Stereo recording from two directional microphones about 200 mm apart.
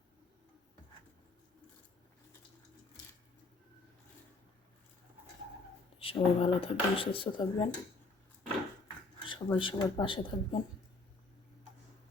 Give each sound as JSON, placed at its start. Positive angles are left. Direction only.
{"t": 6.0, "sound": "speech", "side_deg": 30}
{"t": 9.2, "sound": "speech", "side_deg": 25}